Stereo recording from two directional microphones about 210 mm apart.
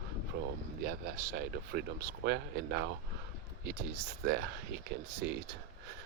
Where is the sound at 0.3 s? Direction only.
55° right (ahead or behind).